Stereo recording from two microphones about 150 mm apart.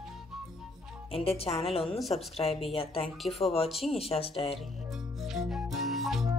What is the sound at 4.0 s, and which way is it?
Speech, 40° left (ahead or behind).